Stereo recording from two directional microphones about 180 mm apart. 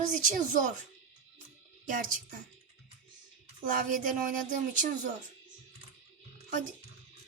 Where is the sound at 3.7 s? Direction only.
50° right (ahead or behind).